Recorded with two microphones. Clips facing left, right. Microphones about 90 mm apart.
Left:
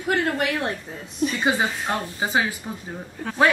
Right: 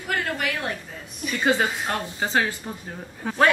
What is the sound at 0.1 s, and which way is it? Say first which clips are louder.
Speech: left 4 dB; 25° left (ahead or behind).